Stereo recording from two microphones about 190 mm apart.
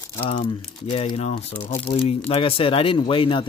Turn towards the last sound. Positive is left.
turn(degrees=25)  # may be behind; listen again after turning